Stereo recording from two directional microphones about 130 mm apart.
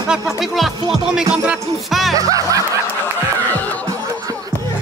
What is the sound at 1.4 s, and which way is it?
Speech, centre (ahead or behind).